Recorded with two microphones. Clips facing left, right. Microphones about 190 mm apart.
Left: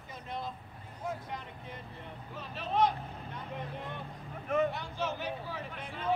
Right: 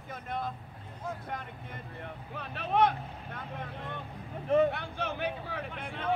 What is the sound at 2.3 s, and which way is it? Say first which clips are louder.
Speech: right 3 dB; 60° right (ahead or behind).